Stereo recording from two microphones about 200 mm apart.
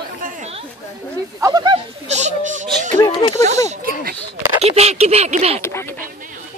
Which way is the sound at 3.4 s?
35° right (ahead or behind).